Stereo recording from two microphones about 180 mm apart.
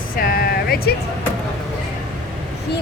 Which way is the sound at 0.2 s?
55° left (ahead or behind).